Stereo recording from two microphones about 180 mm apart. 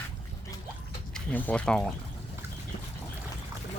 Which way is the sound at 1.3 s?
10° left (ahead or behind).